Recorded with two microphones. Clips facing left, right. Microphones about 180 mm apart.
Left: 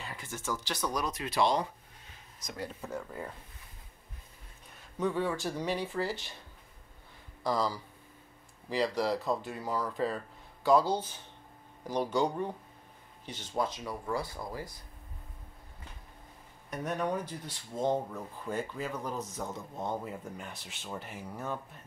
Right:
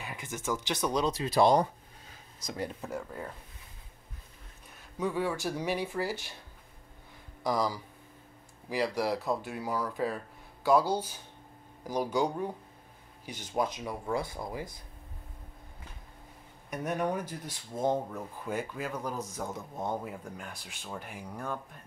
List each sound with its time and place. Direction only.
0.0 s speech: 15° right (ahead or behind); by 1.7 s 45° right (ahead or behind)
2.4 s speech: 25° right (ahead or behind)
2.8 s speech: centre (ahead or behind)
4.9 s speech: 5° right (ahead or behind)
7.4 s speech: 15° right (ahead or behind)
16.7 s speech: 10° right (ahead or behind)